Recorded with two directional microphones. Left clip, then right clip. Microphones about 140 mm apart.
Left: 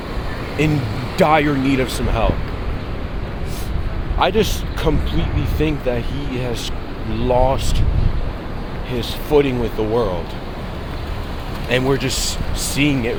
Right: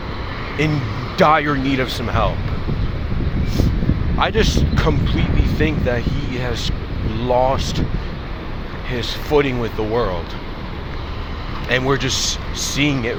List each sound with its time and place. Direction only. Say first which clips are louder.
0.6 s speech: left 1 dB; 25° left (ahead or behind)
4.2 s speech: left 1 dB; 15° left (ahead or behind)
8.9 s speech: left 1 dB; 10° left (ahead or behind)
11.7 s speech: even; 10° left (ahead or behind)